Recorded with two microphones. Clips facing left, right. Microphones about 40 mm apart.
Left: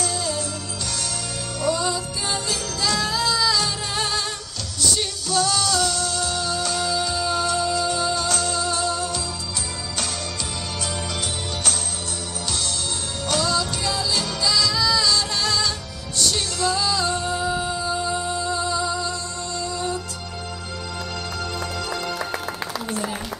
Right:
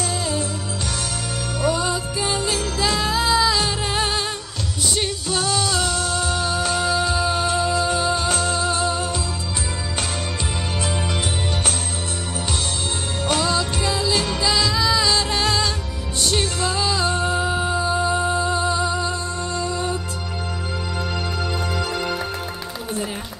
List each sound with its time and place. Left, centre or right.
0.0 s music: right
1.6 s music: right
13.3 s music: right
21.7 s music: right